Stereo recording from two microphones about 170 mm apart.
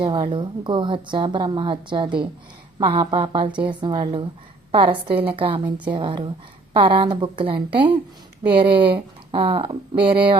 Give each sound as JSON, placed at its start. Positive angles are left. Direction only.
{"t": 0.0, "sound": "a woman's voice", "side_deg": -30}